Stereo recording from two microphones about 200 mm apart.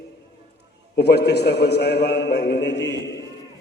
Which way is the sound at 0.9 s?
55° left (ahead or behind).